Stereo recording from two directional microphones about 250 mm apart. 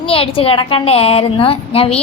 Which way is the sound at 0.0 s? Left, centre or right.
Left.